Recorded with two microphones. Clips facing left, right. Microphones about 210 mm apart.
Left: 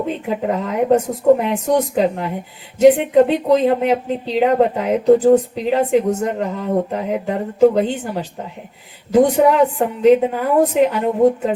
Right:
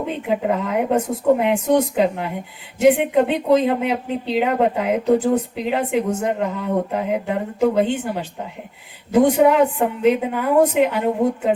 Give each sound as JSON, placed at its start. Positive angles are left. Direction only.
{"t": 0.5, "sound": "speech", "side_deg": 40}